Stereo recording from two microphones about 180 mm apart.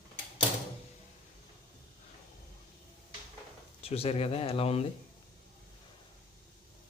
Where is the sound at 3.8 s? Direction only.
35° left (ahead or behind).